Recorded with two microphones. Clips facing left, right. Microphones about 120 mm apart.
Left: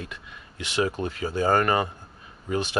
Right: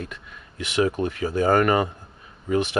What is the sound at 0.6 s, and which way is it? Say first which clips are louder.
Speech: right 3 dB; 30° left (ahead or behind).